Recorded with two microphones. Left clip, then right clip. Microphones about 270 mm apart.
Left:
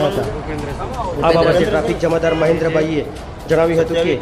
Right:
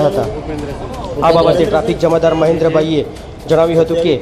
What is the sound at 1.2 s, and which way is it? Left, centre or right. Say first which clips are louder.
A man's voice: right 3 dB; centre.